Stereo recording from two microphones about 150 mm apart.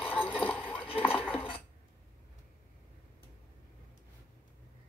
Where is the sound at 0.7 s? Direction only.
40° left (ahead or behind).